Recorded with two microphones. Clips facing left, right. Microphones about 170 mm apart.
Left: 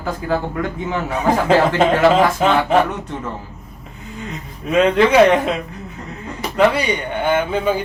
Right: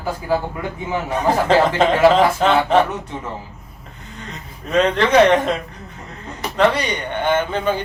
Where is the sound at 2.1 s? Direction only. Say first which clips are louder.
Even; 10° left (ahead or behind).